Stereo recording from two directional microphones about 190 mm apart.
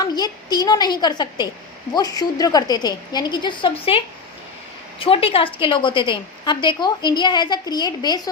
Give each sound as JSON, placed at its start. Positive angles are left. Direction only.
{"t": 0.0, "sound": "a woman's voice", "side_deg": 20}